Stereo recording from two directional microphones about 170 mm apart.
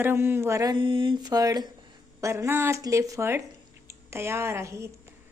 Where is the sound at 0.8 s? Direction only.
30° right (ahead or behind).